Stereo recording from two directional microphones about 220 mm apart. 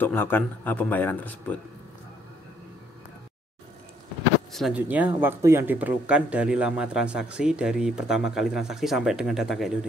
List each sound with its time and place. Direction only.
0.0 s speech: 10° left (ahead or behind)
4.5 s speech: centre (ahead or behind)